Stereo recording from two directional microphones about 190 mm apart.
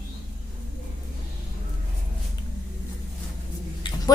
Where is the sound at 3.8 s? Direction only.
25° left (ahead or behind).